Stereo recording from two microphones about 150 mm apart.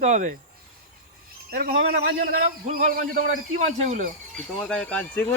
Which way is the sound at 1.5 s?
85° right.